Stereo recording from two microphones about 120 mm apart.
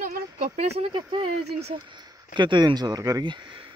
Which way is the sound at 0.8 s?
45° right (ahead or behind).